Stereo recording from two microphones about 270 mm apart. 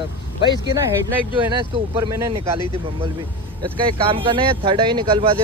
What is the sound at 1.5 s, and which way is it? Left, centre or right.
A man's voice, centre.